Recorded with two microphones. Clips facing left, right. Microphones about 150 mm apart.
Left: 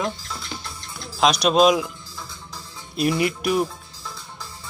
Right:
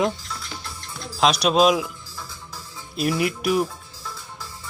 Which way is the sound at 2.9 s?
Centre (ahead or behind).